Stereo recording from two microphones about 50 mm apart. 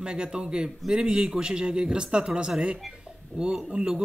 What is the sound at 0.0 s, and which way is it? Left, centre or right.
A man's voice, centre.